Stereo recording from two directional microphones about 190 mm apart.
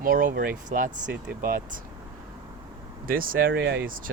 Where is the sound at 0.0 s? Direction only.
45° right (ahead or behind).